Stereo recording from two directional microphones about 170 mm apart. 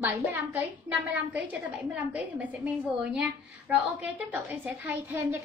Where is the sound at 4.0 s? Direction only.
10° right (ahead or behind).